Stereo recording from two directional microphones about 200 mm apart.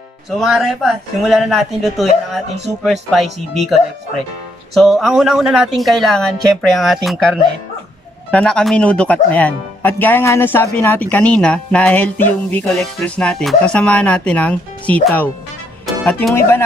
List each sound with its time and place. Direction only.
0.4 s speech: centre (ahead or behind)